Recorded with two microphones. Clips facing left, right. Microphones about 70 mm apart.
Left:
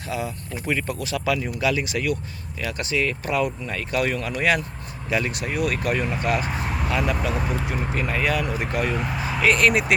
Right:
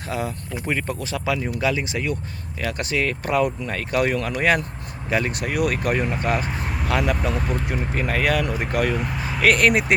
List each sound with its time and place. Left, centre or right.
0.1 s speech: right
2.6 s speech: right
5.7 s speech: right
6.4 s a sound: centre
7.2 s speech: centre
7.9 s speech: right
9.0 s speech: centre
9.4 s speech: right